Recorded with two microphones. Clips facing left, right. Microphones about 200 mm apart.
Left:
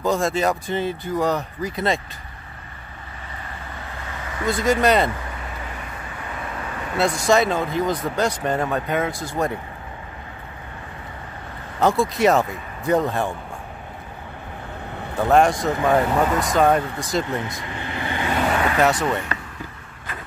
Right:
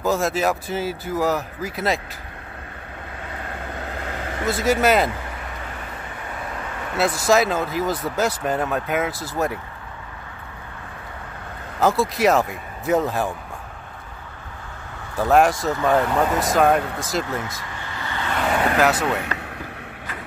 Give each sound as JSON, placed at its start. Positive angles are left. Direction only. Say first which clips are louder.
{"t": 0.0, "sound": "speech", "louder": "even", "side_deg": -5}
{"t": 3.3, "sound": "vehicle", "louder": "right 4 dB", "side_deg": -70}
{"t": 4.5, "sound": "speech", "louder": "even", "side_deg": -5}
{"t": 7.0, "sound": "speech", "louder": "even", "side_deg": 0}
{"t": 11.8, "sound": "speech", "louder": "left 1 dB", "side_deg": 0}
{"t": 15.1, "sound": "speech", "louder": "even", "side_deg": 0}
{"t": 17.3, "sound": "vehicle", "louder": "left 2 dB", "side_deg": 20}
{"t": 18.8, "sound": "speech", "louder": "left 1 dB", "side_deg": 0}
{"t": 19.0, "sound": "speech", "louder": "even", "side_deg": -75}